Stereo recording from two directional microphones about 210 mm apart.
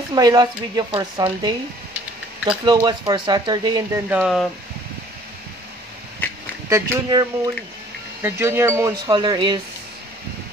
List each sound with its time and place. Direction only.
0.1 s a woman's voice: 20° right (ahead or behind)
2.6 s a woman's voice: 20° right (ahead or behind)
4.1 s speech: centre (ahead or behind)
6.7 s speech: 15° right (ahead or behind)